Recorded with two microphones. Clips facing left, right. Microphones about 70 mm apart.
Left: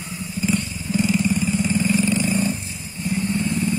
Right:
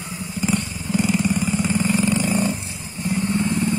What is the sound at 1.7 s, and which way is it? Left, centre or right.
Vehicle, right.